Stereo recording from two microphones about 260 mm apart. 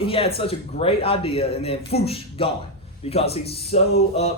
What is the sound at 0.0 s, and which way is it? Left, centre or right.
Speech, left.